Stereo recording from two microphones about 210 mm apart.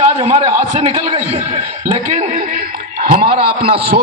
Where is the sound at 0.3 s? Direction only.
25° right (ahead or behind).